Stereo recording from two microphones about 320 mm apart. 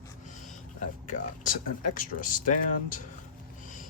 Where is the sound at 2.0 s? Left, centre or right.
Left.